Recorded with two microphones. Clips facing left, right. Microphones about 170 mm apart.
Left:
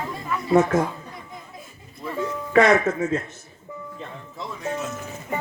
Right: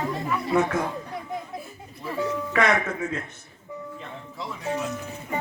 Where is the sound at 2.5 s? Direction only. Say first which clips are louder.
Left 7 dB; 35° left (ahead or behind).